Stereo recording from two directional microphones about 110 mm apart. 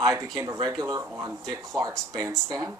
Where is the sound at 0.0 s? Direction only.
30° right (ahead or behind).